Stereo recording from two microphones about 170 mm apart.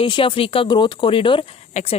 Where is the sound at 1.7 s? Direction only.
45° left (ahead or behind).